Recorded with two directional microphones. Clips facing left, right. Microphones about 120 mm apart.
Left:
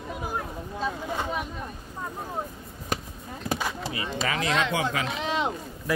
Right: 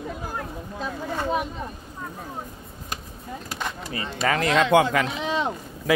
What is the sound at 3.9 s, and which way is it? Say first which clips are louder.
Speech: right 7 dB; 45° right (ahead or behind).